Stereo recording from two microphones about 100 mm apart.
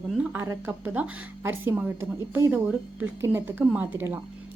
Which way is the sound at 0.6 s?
15° right (ahead or behind).